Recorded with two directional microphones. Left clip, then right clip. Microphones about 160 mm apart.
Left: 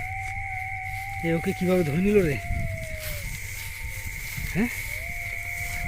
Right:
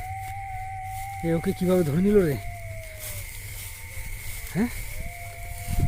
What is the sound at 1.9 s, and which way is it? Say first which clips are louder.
Speech: right 1 dB; 15° right (ahead or behind).